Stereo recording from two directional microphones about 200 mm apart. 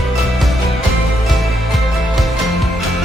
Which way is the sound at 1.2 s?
Centre (ahead or behind).